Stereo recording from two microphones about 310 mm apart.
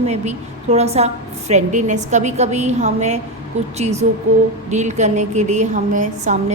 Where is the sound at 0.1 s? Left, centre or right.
Right.